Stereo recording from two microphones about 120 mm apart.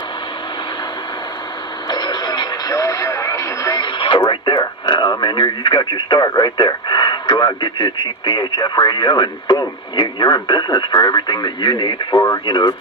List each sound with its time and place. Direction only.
1.9 s radio: 35° left (ahead or behind)
3.8 s radio: 40° left (ahead or behind)
4.3 s speech: 40° left (ahead or behind)